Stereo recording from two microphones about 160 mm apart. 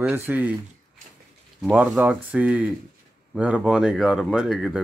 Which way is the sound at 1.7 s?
10° right (ahead or behind).